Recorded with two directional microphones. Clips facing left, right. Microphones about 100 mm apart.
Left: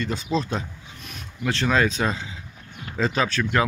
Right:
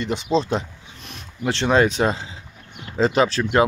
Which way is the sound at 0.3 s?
25° right (ahead or behind).